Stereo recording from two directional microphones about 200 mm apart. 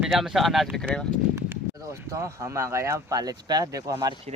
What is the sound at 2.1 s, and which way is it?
Speech, 15° right (ahead or behind).